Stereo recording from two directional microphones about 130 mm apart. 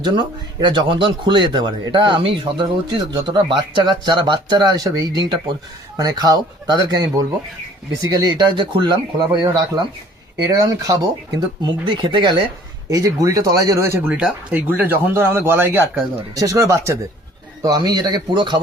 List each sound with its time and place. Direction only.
0.0 s speech: 35° right (ahead or behind)
14.1 s speech: 5° right (ahead or behind); by 18.6 s 35° right (ahead or behind)